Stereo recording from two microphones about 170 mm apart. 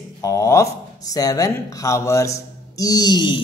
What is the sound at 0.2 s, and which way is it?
Speech, 20° left (ahead or behind).